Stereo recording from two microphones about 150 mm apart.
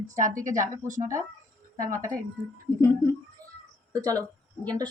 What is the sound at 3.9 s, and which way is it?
Speech, 25° right (ahead or behind).